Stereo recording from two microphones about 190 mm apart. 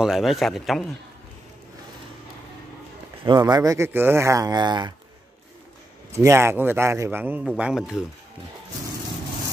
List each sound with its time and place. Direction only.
0.0 s a man's voice: centre (ahead or behind)
3.3 s speech: 20° right (ahead or behind)
6.1 s a man's voice: 15° right (ahead or behind)